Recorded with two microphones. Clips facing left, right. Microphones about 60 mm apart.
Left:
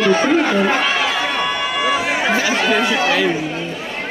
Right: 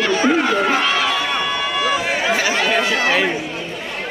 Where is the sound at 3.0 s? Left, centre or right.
Right.